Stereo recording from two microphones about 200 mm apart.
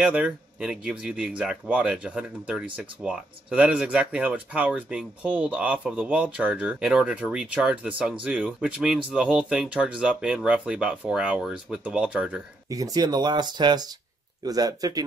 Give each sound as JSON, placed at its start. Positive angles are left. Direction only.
{"t": 0.0, "sound": "speech", "side_deg": -5}
{"t": 12.6, "sound": "speech", "side_deg": -15}